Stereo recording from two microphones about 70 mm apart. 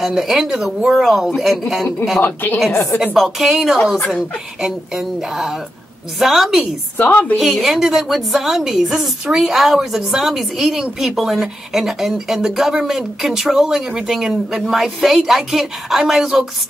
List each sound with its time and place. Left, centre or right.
0.0 s a woman's voice: centre
2.2 s a woman's voice: left
3.2 s a woman's voice: centre
7.0 s a woman's voice: left
7.3 s a woman's voice: centre